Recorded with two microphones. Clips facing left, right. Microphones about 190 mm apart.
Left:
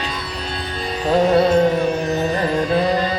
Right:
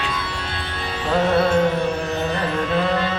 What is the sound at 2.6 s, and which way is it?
Music, 35° left (ahead or behind).